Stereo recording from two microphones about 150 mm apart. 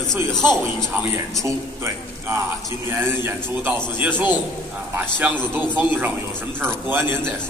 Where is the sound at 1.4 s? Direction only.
20° right (ahead or behind).